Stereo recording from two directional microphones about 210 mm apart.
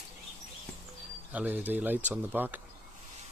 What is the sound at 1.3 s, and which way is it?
Speech, 5° right (ahead or behind).